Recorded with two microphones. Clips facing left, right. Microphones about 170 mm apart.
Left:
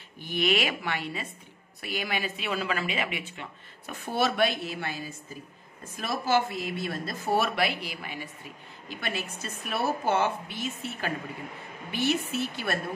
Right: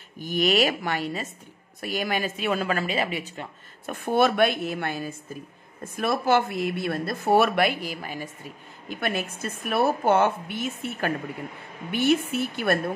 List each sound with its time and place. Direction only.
0.2 s a woman's voice: 40° right (ahead or behind)
8.8 s a woman's voice: 55° right (ahead or behind)